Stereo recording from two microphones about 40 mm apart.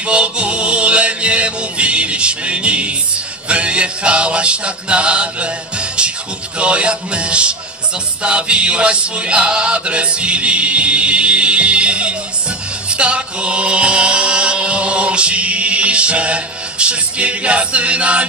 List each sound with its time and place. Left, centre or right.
0.0 s music: right
6.6 s chant: right
8.2 s music: right
12.9 s chant: right